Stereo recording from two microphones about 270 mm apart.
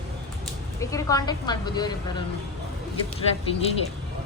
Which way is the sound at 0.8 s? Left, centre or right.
Centre.